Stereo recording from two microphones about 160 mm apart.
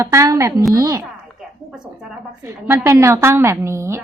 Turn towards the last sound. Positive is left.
turn(degrees=-15)  # may be behind; listen again after turning